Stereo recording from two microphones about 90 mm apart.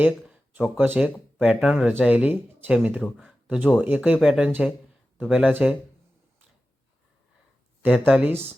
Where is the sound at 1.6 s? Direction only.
5° right (ahead or behind).